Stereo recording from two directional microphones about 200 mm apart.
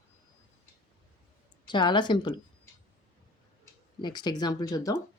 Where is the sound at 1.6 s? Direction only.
25° left (ahead or behind).